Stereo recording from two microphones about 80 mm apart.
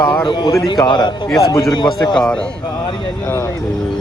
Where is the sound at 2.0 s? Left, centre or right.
Centre.